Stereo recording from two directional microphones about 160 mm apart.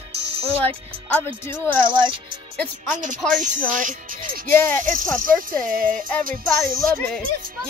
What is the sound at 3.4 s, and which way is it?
Speech, 55° right (ahead or behind).